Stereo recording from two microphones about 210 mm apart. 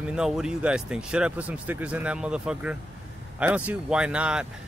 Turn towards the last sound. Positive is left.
turn(degrees=-5)  # may be behind; listen again after turning